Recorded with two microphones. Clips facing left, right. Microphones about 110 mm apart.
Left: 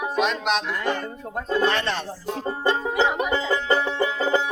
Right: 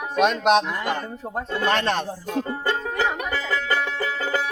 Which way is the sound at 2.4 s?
20° left (ahead or behind).